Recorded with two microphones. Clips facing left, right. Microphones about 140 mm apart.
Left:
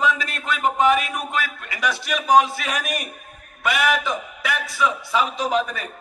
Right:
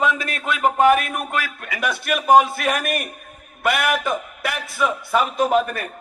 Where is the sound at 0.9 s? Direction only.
55° right (ahead or behind).